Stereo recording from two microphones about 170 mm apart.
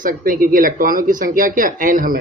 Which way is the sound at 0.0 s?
55° right (ahead or behind).